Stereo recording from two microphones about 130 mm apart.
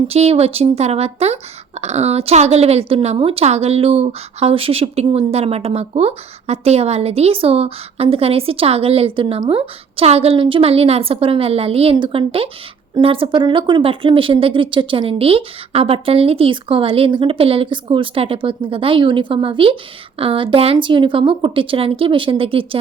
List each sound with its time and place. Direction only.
0.1 s speech: 55° right (ahead or behind)